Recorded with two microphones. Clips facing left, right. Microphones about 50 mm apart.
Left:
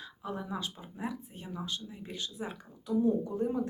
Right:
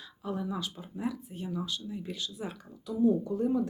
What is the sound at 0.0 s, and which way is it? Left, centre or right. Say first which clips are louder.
Speech: right 3 dB; left.